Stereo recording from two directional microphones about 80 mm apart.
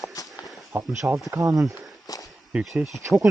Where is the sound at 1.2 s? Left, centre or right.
Right.